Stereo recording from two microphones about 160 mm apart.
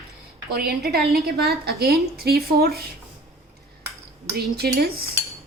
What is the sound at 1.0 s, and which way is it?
Speech, 75° right (ahead or behind).